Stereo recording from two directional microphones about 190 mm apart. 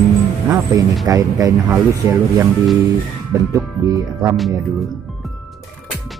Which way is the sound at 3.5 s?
15° right (ahead or behind).